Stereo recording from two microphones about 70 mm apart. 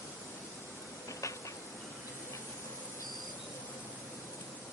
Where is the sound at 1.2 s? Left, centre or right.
Left.